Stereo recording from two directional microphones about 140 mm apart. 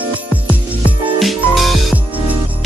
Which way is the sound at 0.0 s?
10° right (ahead or behind).